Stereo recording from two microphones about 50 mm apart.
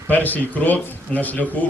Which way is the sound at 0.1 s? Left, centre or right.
Left.